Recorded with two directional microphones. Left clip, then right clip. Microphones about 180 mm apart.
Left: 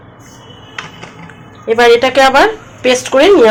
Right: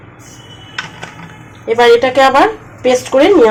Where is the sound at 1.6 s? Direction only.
5° left (ahead or behind).